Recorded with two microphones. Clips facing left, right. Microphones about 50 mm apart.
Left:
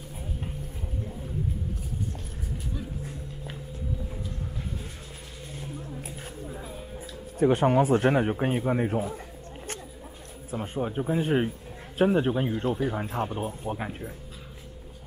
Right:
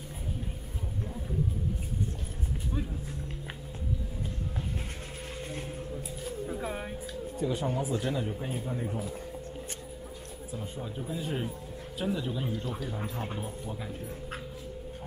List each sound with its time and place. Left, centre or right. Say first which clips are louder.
6.6 s music: right 5 dB; right
7.3 s a man's voice: left 10 dB; left
10.5 s a man's voice: left 9 dB; left